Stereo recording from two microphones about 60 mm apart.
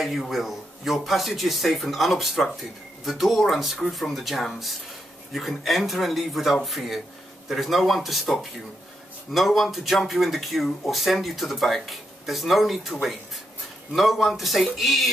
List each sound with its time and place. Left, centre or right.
0.0 s speech: centre